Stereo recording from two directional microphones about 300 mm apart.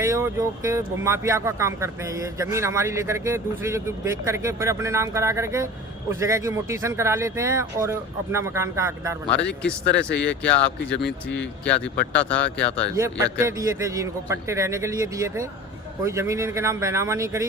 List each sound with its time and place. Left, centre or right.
0.0 s speech: centre
9.6 s speech: centre
10.8 s speech: left
11.3 s speech: centre
12.9 s speech: centre